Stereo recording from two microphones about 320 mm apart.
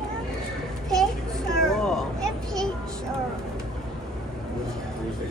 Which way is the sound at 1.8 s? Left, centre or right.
Centre.